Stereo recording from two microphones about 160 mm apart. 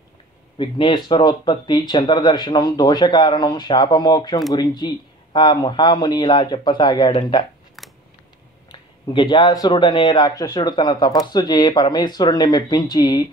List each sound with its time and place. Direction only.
0.6 s speech: 30° left (ahead or behind)
8.7 s speech: 25° left (ahead or behind)